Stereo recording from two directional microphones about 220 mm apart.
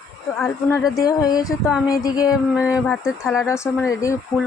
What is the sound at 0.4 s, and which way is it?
A woman's voice, 15° left (ahead or behind).